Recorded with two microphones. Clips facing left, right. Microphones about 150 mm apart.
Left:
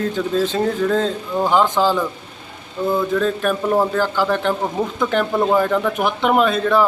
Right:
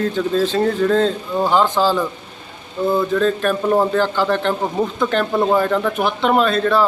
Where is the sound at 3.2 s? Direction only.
10° left (ahead or behind).